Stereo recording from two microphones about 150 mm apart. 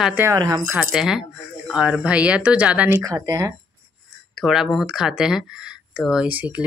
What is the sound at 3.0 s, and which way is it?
Speech, 25° right (ahead or behind).